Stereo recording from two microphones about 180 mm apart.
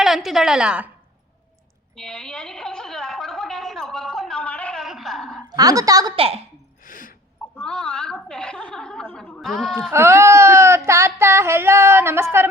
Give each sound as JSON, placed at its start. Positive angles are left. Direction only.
{"t": 0.0, "sound": "a woman's voice", "side_deg": 0}
{"t": 2.0, "sound": "gargling", "side_deg": 5}
{"t": 5.5, "sound": "a woman's voice", "side_deg": -20}
{"t": 6.1, "sound": "a woman's voice", "side_deg": -35}
{"t": 6.8, "sound": "sneeze", "side_deg": 50}
{"t": 7.5, "sound": "a sound", "side_deg": 5}
{"t": 9.9, "sound": "a sound", "side_deg": -15}